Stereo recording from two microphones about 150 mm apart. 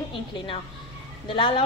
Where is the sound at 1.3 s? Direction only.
35° left (ahead or behind).